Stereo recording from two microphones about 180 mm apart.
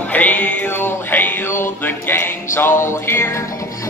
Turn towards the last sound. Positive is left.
turn(degrees=15)  # may be behind; listen again after turning